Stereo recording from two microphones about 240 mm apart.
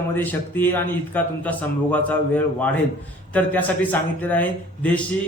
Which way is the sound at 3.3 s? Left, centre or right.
Centre.